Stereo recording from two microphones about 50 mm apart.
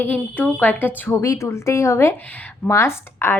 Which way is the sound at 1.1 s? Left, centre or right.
Left.